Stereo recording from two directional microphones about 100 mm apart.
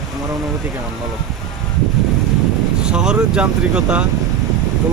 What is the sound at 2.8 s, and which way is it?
Speech, 10° right (ahead or behind).